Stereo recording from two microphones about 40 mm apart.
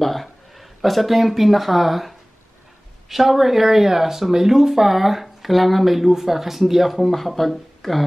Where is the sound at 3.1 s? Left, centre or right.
Centre.